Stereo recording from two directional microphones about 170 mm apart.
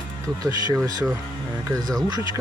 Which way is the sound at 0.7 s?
20° right (ahead or behind).